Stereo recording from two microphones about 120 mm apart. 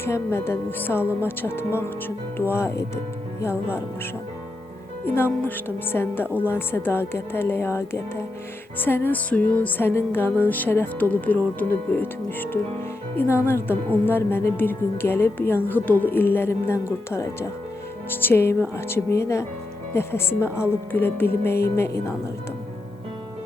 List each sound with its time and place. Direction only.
0.0 s a woman's voice: 20° left (ahead or behind)
5.0 s a woman's voice: 20° left (ahead or behind)